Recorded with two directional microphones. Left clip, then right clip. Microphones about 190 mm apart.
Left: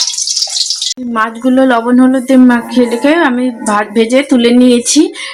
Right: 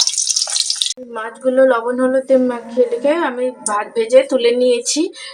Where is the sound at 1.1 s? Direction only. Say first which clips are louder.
Left 4 dB; 50° left (ahead or behind).